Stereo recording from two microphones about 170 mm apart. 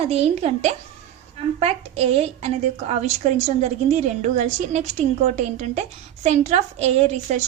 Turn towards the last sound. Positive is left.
turn(degrees=-40)  # may be behind; listen again after turning